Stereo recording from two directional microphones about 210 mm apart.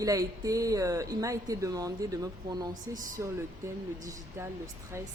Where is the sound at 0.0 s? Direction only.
15° right (ahead or behind).